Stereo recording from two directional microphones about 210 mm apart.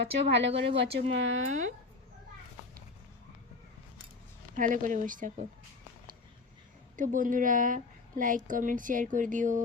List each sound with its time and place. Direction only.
0.0 s speech: 55° right (ahead or behind)
4.5 s a woman's voice: 40° right (ahead or behind)
6.9 s a woman's voice: 40° right (ahead or behind)